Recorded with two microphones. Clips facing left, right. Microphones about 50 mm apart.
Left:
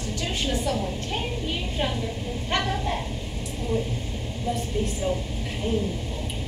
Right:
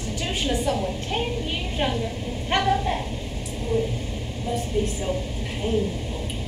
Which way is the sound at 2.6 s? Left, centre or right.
Centre.